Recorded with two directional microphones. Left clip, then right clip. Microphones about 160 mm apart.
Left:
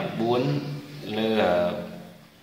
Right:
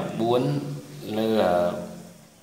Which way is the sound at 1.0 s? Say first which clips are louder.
Right 1 dB; 40° right (ahead or behind).